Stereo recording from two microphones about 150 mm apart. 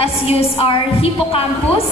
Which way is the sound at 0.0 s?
40° left (ahead or behind).